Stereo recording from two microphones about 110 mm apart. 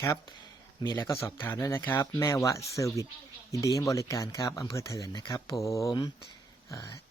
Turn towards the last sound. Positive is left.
turn(degrees=35)  # may be behind; listen again after turning